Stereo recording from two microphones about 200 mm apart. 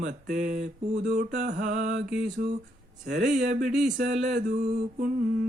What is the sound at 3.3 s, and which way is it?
Mantra, 40° right (ahead or behind).